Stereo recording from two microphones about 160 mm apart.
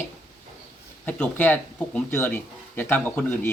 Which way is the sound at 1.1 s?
10° left (ahead or behind).